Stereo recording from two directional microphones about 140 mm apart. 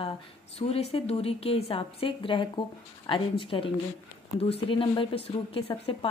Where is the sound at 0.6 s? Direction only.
45° left (ahead or behind).